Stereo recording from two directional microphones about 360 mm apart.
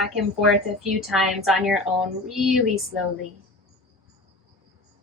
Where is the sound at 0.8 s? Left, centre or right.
Centre.